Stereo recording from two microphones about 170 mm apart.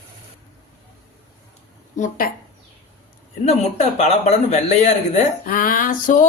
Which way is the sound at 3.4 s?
40° left (ahead or behind).